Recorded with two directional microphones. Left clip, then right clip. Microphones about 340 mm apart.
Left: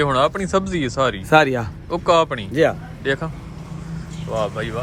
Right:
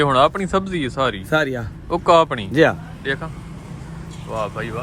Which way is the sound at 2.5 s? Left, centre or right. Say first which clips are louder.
Right 2 dB; centre.